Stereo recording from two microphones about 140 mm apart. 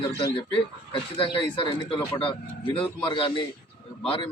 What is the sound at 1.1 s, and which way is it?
A man's voice, 40° left (ahead or behind).